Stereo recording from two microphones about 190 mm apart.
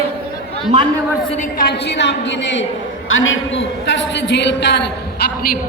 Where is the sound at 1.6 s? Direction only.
60° left (ahead or behind).